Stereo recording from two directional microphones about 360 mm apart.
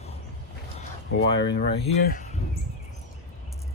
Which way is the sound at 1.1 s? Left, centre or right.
Left.